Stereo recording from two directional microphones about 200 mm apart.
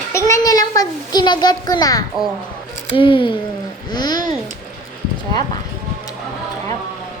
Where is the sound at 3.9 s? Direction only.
20° left (ahead or behind).